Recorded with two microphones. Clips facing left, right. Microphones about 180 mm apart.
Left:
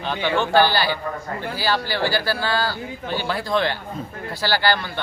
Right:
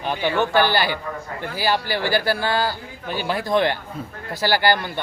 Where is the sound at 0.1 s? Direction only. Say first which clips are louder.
Right 1 dB; 15° right (ahead or behind).